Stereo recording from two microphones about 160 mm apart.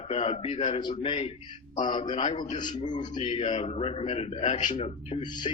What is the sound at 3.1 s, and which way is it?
A man's voice, 40° left (ahead or behind).